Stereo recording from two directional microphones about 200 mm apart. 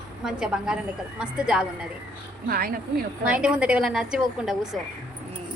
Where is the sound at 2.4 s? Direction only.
50° right (ahead or behind).